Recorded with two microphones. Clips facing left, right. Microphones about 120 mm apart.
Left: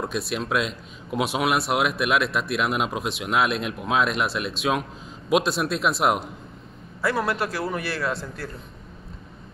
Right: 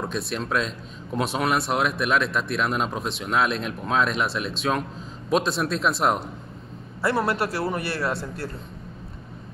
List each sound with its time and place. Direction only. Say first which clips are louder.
0.0 s speech: left 1 dB; 5° left (ahead or behind)